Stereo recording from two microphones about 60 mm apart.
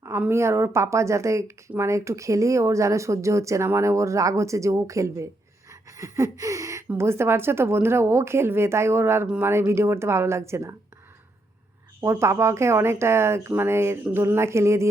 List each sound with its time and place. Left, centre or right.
0.3 s speech: right
6.0 s a sound: right
6.8 s a woman's voice: right
11.9 s a woman's voice: right